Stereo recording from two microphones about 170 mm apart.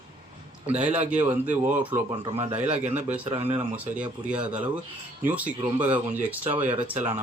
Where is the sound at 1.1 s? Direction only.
10° right (ahead or behind).